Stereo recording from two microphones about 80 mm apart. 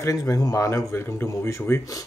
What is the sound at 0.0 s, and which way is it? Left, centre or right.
Speech, left.